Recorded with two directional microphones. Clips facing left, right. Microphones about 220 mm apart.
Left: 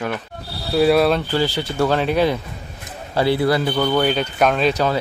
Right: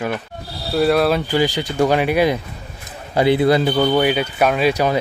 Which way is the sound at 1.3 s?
15° right (ahead or behind).